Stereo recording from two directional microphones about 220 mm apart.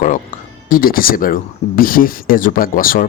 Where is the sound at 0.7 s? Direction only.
40° left (ahead or behind).